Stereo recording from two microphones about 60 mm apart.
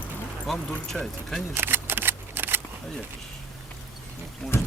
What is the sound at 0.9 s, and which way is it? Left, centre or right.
Speech, centre.